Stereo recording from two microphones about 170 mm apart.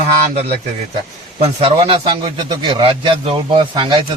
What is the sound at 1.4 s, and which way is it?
A man's voice, 35° right (ahead or behind).